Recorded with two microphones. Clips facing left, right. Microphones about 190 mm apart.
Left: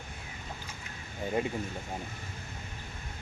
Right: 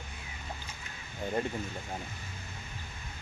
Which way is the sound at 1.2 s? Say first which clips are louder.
Left 1 dB; 10° left (ahead or behind).